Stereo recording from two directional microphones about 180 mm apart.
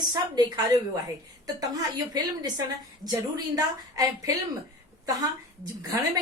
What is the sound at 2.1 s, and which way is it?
Speech, 20° right (ahead or behind).